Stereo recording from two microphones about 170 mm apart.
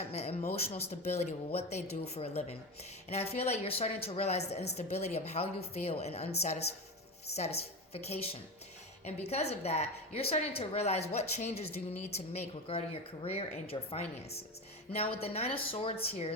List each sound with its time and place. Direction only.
0.0 s speech: 40° left (ahead or behind)